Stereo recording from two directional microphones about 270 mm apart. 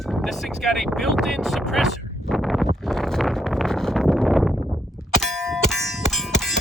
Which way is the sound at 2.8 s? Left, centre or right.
Centre.